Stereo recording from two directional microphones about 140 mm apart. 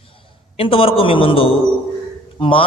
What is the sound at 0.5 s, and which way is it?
A man's voice, 40° left (ahead or behind).